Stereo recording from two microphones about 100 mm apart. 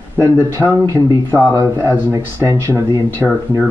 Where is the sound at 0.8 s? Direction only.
40° right (ahead or behind).